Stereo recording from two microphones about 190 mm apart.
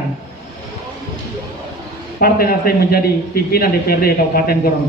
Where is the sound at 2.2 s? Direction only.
50° left (ahead or behind).